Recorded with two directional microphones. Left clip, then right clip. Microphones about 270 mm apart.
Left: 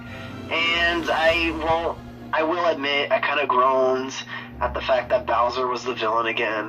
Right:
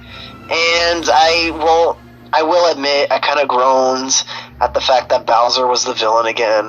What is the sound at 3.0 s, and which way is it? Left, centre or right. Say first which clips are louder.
Speech: right 7 dB; right.